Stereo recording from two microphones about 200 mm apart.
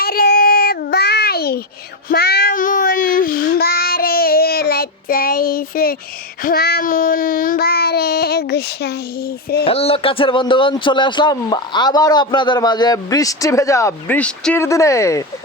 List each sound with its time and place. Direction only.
0.0 s child singing: 50° left (ahead or behind)
9.6 s speech: 30° left (ahead or behind)